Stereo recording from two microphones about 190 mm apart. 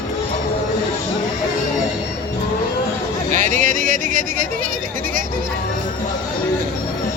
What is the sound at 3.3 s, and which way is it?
Speech, 40° right (ahead or behind).